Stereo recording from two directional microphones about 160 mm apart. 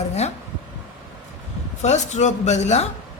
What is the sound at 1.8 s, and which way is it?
A man's voice, 45° left (ahead or behind).